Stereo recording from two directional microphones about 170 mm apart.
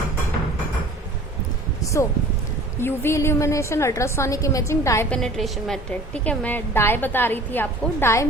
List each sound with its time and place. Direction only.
1.8 s a sound: 20° left (ahead or behind)
2.8 s a woman's voice: 15° left (ahead or behind)
5.2 s a woman's voice: centre (ahead or behind)